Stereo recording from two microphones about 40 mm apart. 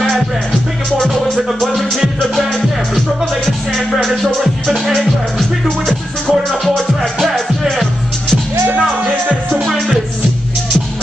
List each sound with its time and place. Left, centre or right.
1.0 s music: centre
3.7 s music: centre
5.9 s music: centre
8.7 s music: right